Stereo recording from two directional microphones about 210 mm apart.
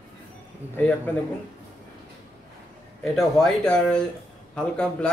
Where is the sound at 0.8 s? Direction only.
10° left (ahead or behind).